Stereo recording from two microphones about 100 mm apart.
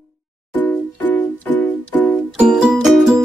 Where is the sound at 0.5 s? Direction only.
15° left (ahead or behind).